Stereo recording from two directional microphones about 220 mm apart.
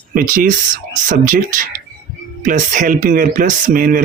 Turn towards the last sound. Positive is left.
turn(degrees=-40)  # may be behind; listen again after turning